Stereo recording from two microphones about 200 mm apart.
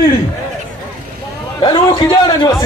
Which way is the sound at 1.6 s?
20° left (ahead or behind).